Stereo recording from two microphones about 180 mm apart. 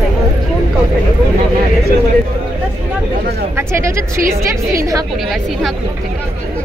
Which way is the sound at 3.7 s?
15° right (ahead or behind).